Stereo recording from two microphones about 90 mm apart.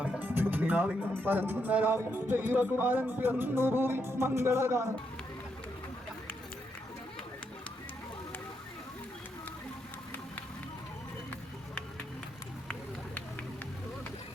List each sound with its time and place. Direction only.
0.2 s music: 20° right (ahead or behind)